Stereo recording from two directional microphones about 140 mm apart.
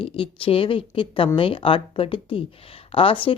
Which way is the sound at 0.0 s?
40° left (ahead or behind).